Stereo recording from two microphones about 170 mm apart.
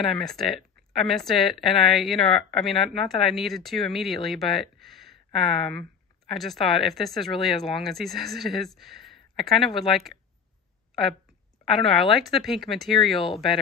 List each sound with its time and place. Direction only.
0.0 s speech: centre (ahead or behind)
11.7 s speech: centre (ahead or behind)